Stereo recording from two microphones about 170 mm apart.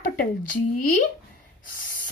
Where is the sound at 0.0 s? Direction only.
60° left (ahead or behind).